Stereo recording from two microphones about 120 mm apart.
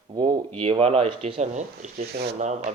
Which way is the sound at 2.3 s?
80° right.